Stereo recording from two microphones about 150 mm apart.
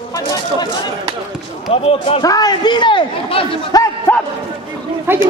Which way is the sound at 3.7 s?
25° left (ahead or behind).